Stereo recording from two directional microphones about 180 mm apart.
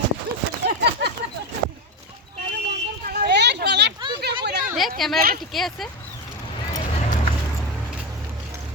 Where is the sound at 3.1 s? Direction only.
65° right (ahead or behind).